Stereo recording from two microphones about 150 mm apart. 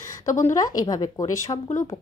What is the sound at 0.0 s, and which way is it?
A woman's voice, 20° left (ahead or behind).